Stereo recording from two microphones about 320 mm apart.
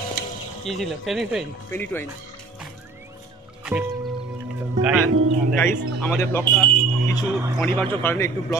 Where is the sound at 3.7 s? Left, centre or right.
Centre.